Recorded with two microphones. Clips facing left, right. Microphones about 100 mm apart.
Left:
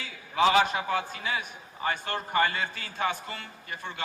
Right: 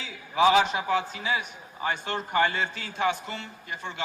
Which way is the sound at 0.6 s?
50° left (ahead or behind).